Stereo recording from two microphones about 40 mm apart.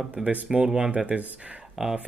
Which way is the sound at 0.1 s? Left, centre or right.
Right.